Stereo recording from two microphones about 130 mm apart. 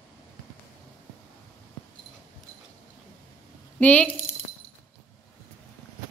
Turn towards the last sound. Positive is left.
turn(degrees=10)  # may be behind; listen again after turning